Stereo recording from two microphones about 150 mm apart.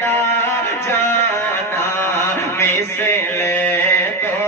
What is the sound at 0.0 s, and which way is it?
Music, 15° left (ahead or behind).